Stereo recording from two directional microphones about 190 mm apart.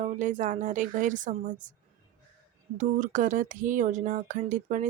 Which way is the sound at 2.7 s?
40° right (ahead or behind).